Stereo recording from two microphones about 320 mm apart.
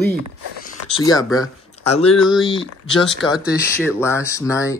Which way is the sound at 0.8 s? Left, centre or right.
Centre.